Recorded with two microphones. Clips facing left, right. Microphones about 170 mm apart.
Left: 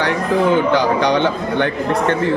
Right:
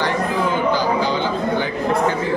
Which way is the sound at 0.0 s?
65° left (ahead or behind).